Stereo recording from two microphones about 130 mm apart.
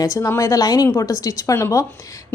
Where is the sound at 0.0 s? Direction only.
25° left (ahead or behind).